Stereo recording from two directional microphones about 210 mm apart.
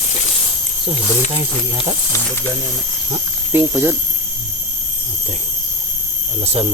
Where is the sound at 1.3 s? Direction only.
25° right (ahead or behind).